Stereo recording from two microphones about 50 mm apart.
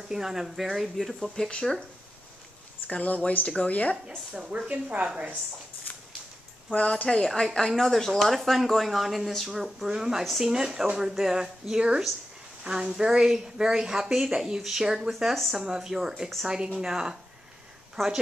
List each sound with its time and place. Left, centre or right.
0.1 s a woman's voice: centre
1.5 s speech: centre
2.9 s speech: left
4.4 s a woman's voice: centre
5.9 s a sound: left
6.7 s speech: left
7.1 s speech: centre
10.2 s speech: centre
10.5 s a woman's voice: centre
18.0 s speech: centre